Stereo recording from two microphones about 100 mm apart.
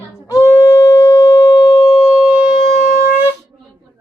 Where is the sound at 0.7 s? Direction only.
35° left (ahead or behind).